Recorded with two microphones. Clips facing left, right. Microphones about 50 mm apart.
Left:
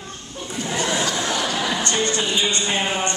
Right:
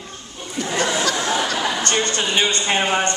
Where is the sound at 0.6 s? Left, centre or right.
Right.